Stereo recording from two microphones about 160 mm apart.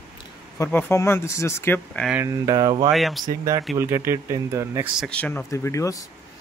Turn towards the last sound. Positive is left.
turn(degrees=20)  # may be behind; listen again after turning